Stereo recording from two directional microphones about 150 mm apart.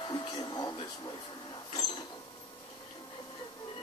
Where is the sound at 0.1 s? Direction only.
25° left (ahead or behind).